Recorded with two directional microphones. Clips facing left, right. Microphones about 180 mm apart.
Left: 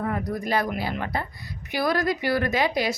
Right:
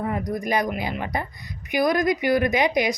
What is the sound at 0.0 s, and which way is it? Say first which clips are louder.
Speech: right 1 dB; 15° right (ahead or behind).